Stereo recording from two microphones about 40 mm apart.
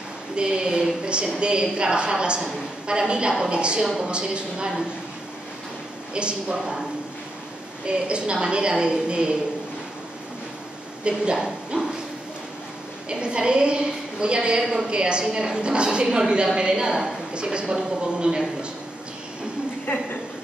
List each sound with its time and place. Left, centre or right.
0.4 s a woman's voice: right
6.1 s a woman's voice: right
7.8 s a woman's voice: right
11.3 s speech: centre
13.1 s a woman's voice: right
14.6 s a woman's voice: centre
14.9 s a woman's voice: right
19.9 s speech: left